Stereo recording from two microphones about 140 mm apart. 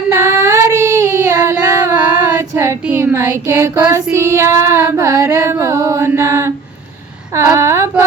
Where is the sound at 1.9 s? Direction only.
10° right (ahead or behind).